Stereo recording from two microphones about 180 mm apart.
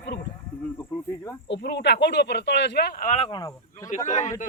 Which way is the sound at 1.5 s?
70° left (ahead or behind).